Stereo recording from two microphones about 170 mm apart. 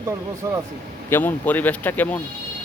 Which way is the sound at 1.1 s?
10° left (ahead or behind).